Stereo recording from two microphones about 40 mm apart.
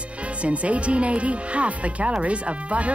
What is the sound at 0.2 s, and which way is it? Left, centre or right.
Speech, right.